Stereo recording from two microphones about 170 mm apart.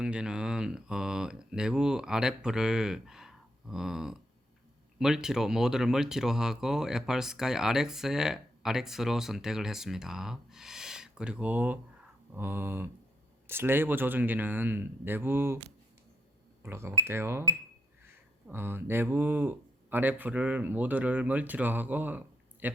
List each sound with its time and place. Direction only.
0.0 s speech: 5° right (ahead or behind)
16.6 s speech: 15° right (ahead or behind)